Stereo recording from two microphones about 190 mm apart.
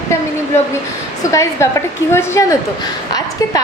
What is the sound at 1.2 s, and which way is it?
A woman's voice, 15° left (ahead or behind).